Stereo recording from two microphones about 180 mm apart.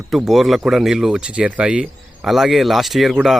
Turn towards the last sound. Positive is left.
turn(degrees=0)  # may be behind; listen again after turning